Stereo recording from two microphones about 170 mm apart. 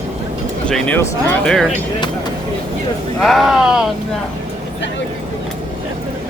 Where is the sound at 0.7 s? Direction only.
10° left (ahead or behind).